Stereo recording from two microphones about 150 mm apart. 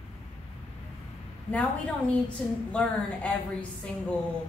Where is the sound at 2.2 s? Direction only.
10° left (ahead or behind).